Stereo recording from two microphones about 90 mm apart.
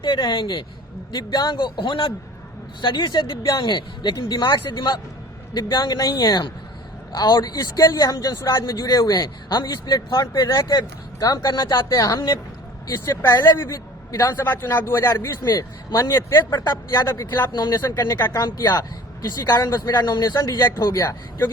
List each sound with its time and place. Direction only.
0.0 s a man's voice: 60° left (ahead or behind)
11.9 s a woman's voice: 40° left (ahead or behind)
14.3 s speech: 20° left (ahead or behind)
15.4 s speech: 50° left (ahead or behind)
16.0 s a woman's voice: 30° left (ahead or behind)
16.5 s speech: 50° left (ahead or behind)
20.6 s speech: 30° left (ahead or behind)